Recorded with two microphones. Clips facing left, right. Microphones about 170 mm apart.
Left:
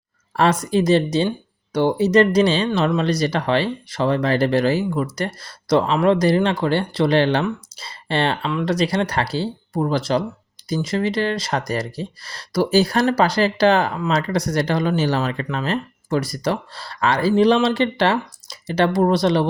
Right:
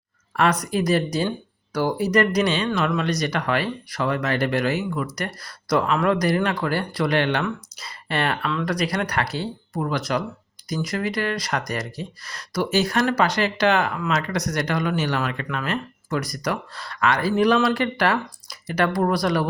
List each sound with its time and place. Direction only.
0.3 s speech: 25° left (ahead or behind)